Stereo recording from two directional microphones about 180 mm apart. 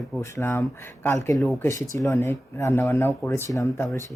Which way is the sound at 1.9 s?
15° left (ahead or behind).